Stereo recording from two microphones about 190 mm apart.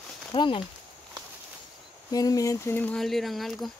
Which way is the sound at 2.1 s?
20° left (ahead or behind).